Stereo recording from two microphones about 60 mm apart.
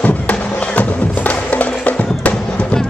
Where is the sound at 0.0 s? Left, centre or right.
Left.